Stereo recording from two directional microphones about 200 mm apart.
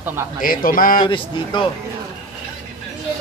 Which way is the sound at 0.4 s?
45° left (ahead or behind).